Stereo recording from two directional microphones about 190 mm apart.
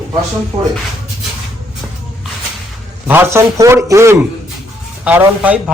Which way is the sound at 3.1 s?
10° right (ahead or behind).